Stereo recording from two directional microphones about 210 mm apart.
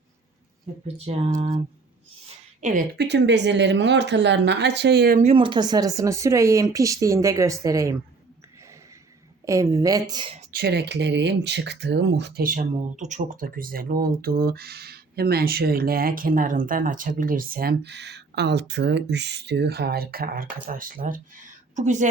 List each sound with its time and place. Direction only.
0.9 s speech: 30° right (ahead or behind)
3.0 s speech: 55° right (ahead or behind)
5.2 s speech: 25° right (ahead or behind)
9.5 s speech: 15° right (ahead or behind)
10.5 s speech: 50° right (ahead or behind)